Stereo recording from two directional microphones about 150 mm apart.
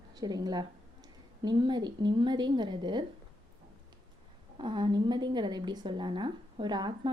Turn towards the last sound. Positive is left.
turn(degrees=-30)  # may be behind; listen again after turning